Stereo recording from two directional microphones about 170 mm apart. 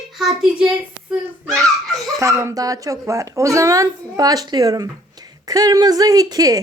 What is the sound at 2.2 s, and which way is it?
A woman's voice, 20° right (ahead or behind).